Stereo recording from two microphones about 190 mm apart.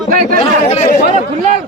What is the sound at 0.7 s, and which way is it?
Speech, 35° left (ahead or behind).